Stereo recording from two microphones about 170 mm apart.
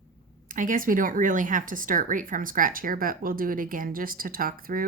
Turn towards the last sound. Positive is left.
turn(degrees=-55)  # may be behind; listen again after turning